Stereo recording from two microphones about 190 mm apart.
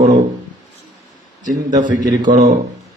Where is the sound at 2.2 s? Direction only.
40° right (ahead or behind).